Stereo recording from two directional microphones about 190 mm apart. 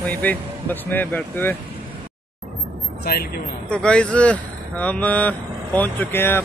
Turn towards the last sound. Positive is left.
turn(degrees=10)  # may be behind; listen again after turning